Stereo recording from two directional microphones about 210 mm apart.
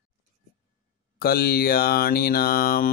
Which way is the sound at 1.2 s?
45° left (ahead or behind).